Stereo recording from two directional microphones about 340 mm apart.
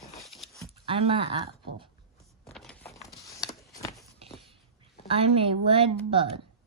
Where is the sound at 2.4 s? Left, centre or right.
Centre.